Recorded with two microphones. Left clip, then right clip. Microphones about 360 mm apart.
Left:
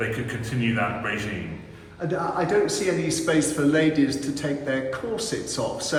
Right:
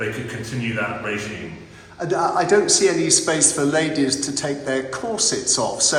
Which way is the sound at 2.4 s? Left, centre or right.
Centre.